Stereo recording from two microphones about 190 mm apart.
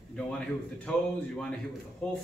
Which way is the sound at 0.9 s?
5° left (ahead or behind).